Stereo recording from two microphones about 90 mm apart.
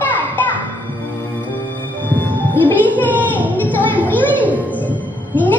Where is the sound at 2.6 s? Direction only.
20° left (ahead or behind).